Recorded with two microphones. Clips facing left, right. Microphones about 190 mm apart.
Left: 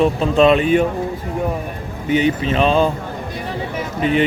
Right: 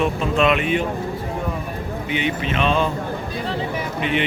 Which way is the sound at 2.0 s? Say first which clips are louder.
Left 8 dB; 40° left (ahead or behind).